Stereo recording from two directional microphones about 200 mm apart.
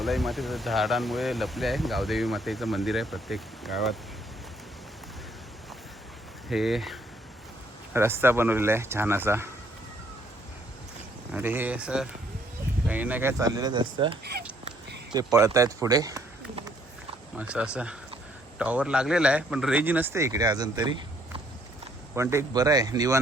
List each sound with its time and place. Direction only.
0.0 s speech: centre (ahead or behind)
6.5 s speech: centre (ahead or behind)
7.9 s a man's voice: 10° right (ahead or behind)
11.3 s a man's voice: 10° right (ahead or behind)
17.3 s a man's voice: 5° right (ahead or behind)
22.1 s a man's voice: 15° right (ahead or behind)